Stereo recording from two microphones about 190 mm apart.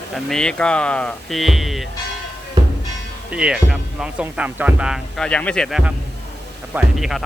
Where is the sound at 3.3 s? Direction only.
5° right (ahead or behind).